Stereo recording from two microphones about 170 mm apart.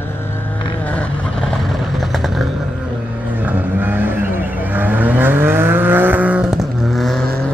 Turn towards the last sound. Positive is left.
turn(degrees=0)  # may be behind; listen again after turning